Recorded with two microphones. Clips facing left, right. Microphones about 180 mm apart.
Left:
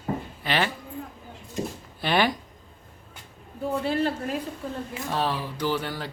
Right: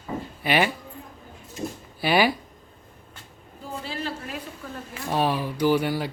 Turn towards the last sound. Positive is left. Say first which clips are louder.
# right 6 dB
turn(degrees=-10)  # may be behind; listen again after turning